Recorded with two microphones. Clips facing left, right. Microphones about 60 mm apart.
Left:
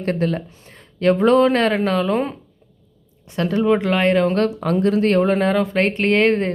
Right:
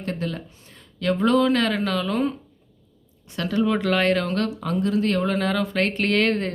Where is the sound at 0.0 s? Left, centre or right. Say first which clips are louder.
Left 8 dB; left.